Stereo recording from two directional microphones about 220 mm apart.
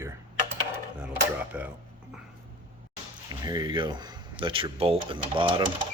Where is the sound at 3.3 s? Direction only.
15° right (ahead or behind).